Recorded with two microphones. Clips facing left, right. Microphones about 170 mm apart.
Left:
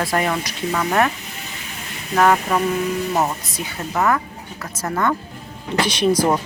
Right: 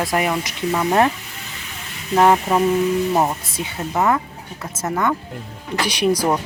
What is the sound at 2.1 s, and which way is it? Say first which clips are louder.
Speech: right 2 dB; 20° right (ahead or behind).